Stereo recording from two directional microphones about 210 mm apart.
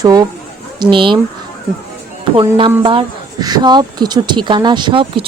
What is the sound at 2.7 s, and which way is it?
Speech, 20° right (ahead or behind).